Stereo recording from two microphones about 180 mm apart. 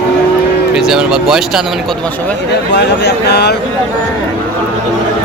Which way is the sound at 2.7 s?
70° left (ahead or behind).